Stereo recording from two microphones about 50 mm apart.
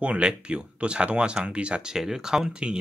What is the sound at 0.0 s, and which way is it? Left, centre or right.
Speech, right.